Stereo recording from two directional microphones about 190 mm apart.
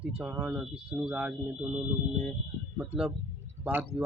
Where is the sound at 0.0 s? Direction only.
10° right (ahead or behind).